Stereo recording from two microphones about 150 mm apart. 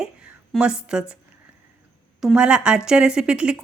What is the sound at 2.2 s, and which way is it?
Speech, 5° right (ahead or behind).